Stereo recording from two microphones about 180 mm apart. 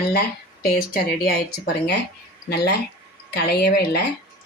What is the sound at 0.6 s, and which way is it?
Speech, 55° left (ahead or behind).